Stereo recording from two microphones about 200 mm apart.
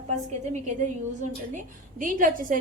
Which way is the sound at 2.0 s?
40° right (ahead or behind).